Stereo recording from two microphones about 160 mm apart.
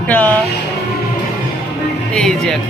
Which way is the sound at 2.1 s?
5° left (ahead or behind).